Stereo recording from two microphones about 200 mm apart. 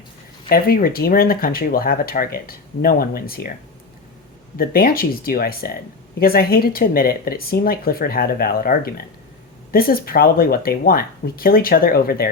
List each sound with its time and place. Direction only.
0.4 s speech: 45° left (ahead or behind)
4.5 s speech: 45° left (ahead or behind)